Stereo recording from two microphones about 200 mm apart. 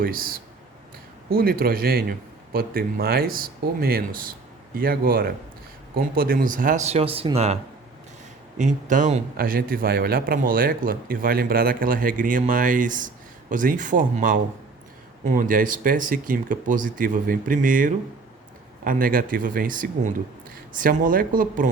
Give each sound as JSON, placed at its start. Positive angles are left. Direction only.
{"t": 0.0, "sound": "a man's voice", "side_deg": -45}